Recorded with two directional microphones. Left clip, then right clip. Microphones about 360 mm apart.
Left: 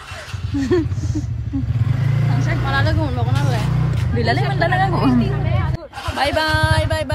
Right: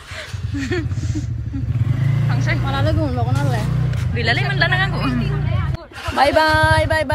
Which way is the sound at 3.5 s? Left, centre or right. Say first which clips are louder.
Left 1 dB; centre.